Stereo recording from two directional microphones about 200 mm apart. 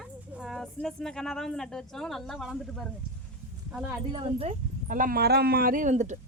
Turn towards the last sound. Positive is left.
turn(degrees=-35)  # may be behind; listen again after turning